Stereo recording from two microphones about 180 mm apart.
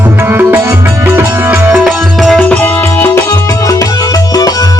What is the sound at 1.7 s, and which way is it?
Music, centre (ahead or behind).